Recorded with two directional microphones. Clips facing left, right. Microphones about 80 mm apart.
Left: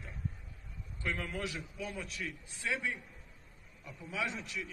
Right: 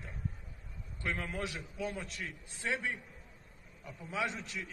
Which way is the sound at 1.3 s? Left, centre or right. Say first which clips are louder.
Even; right.